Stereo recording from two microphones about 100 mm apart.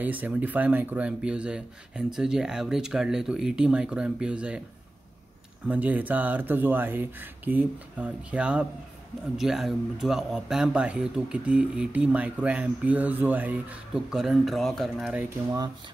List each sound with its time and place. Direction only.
0.0 s speech: 15° right (ahead or behind)
5.7 s speech: 15° right (ahead or behind)
13.9 s speech: 5° right (ahead or behind)
15.0 s speech: 15° right (ahead or behind)